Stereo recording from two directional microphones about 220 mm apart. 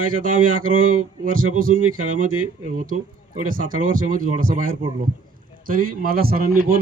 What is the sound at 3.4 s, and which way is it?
Speech, 40° right (ahead or behind).